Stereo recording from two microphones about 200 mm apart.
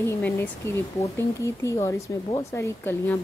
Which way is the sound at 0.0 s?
10° left (ahead or behind).